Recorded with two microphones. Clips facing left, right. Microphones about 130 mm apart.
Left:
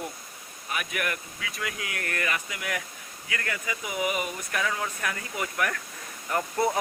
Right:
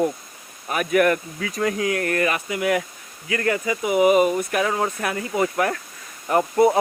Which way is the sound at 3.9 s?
25° right (ahead or behind).